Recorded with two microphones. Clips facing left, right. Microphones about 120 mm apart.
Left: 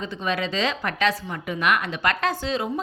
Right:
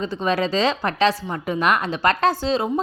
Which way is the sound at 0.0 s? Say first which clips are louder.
Right 5 dB; 35° right (ahead or behind).